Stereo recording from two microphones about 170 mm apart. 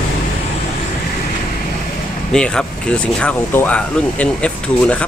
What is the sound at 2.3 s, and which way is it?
Speech, 5° left (ahead or behind).